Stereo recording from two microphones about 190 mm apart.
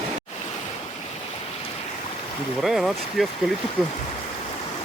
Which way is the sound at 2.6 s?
Centre (ahead or behind).